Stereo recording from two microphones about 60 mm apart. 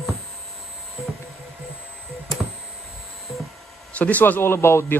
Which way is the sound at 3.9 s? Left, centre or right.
Left.